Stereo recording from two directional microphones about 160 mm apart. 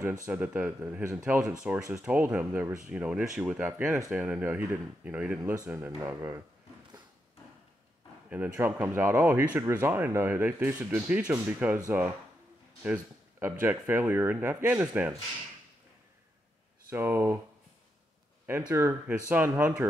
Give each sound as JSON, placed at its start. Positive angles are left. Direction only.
{"t": 0.3, "sound": "speech", "side_deg": -10}
{"t": 5.7, "sound": "speech", "side_deg": -20}
{"t": 8.3, "sound": "speech", "side_deg": -10}
{"t": 12.8, "sound": "speech", "side_deg": -10}
{"t": 16.9, "sound": "speech", "side_deg": -15}
{"t": 18.7, "sound": "speech", "side_deg": -15}